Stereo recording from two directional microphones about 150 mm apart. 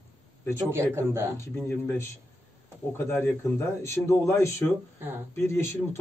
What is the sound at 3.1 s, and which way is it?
A man's voice, 15° left (ahead or behind).